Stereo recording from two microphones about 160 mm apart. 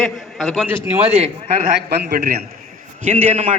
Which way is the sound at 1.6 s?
90° right.